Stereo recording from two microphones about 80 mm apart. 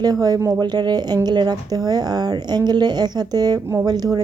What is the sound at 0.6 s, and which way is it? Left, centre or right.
Speech, right.